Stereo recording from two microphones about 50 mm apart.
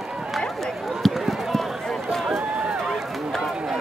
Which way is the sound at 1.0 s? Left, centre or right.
Centre.